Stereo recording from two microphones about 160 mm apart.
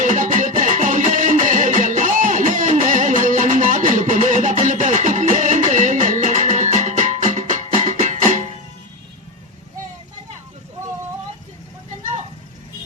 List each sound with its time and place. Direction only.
0.0 s music: 50° right (ahead or behind)